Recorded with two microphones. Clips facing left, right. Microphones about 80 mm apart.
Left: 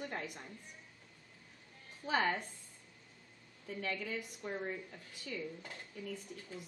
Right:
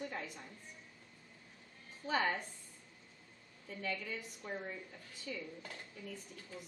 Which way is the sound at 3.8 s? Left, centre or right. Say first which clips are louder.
Left 2 dB; left.